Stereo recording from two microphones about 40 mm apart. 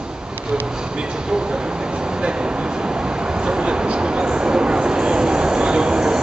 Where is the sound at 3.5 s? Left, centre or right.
Right.